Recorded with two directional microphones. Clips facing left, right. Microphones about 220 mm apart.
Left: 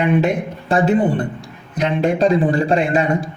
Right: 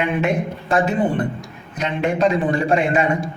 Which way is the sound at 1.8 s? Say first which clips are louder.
Left 3 dB; 35° left (ahead or behind).